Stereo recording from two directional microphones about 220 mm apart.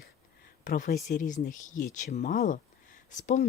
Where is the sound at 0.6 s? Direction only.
40° left (ahead or behind).